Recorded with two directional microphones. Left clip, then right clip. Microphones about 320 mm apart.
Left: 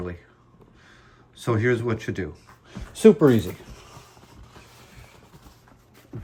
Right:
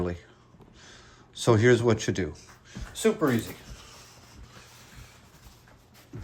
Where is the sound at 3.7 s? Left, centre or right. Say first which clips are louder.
Left 2 dB; left.